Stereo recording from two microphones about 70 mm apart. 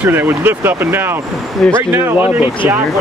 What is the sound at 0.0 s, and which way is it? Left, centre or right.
Speech, right.